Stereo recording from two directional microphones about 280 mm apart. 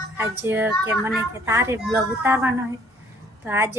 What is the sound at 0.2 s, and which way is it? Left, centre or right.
A woman's voice, centre.